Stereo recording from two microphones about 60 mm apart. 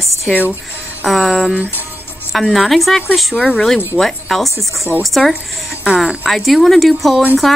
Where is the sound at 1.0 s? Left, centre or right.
Centre.